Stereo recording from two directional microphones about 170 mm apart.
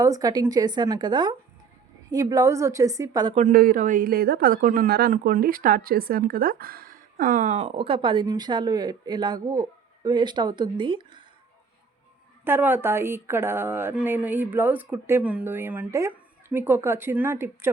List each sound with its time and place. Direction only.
0.0 s a woman's voice: 20° right (ahead or behind)
3.3 s speech: 55° right (ahead or behind); by 11.2 s 30° right (ahead or behind)
12.5 s speech: 10° right (ahead or behind)